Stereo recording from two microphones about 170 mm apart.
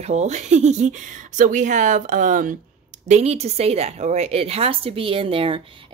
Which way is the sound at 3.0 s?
40° right (ahead or behind).